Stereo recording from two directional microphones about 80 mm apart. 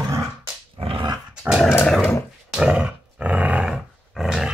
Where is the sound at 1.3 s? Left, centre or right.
Centre.